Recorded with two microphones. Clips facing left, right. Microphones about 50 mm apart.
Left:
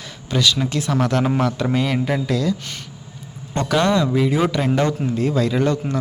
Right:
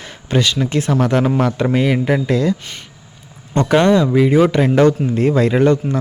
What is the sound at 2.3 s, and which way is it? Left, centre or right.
Speech, right.